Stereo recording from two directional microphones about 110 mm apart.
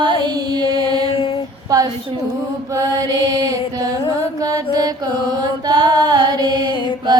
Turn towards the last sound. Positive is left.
turn(degrees=-40)  # may be behind; listen again after turning